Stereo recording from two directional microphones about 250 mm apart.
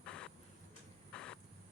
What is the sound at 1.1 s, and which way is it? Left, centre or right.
Vehicle, centre.